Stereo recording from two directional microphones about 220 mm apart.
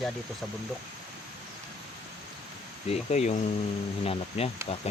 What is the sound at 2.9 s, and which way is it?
Speech, 30° left (ahead or behind).